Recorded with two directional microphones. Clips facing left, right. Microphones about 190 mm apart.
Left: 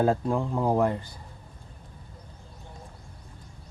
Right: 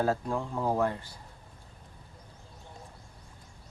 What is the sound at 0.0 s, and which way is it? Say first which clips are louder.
Speech: left 5 dB; 20° left (ahead or behind).